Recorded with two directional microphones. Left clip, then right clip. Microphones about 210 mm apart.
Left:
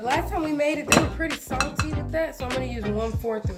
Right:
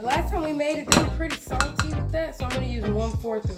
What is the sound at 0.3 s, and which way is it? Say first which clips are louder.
Dishes: left 1 dB; 40° left (ahead or behind).